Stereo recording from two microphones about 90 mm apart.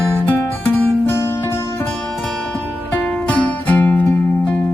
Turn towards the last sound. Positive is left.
turn(degrees=15)  # may be behind; listen again after turning